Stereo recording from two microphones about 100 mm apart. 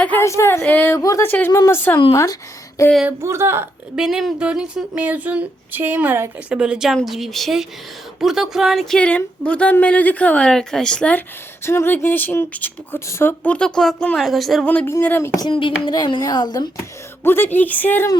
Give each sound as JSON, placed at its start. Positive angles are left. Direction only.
{"t": 0.2, "sound": "speech", "side_deg": 25}
{"t": 0.6, "sound": "a woman's voice", "side_deg": 15}
{"t": 0.9, "sound": "a woman's voice", "side_deg": 35}
{"t": 1.2, "sound": "speech", "side_deg": 20}
{"t": 3.1, "sound": "speech", "side_deg": -25}
{"t": 3.9, "sound": "speech", "side_deg": -5}
{"t": 9.0, "sound": "a woman's voice", "side_deg": 15}
{"t": 11.6, "sound": "speech", "side_deg": 25}
{"t": 13.4, "sound": "speech", "side_deg": 10}
{"t": 14.6, "sound": "a woman's voice", "side_deg": 15}
{"t": 15.4, "sound": "a child's voice", "side_deg": 55}
{"t": 17.2, "sound": "speech", "side_deg": 20}